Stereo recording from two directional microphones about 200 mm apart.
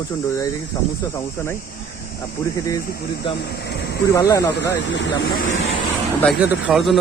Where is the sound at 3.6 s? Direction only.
55° left (ahead or behind).